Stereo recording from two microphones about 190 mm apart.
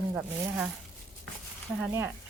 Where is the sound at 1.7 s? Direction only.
10° right (ahead or behind).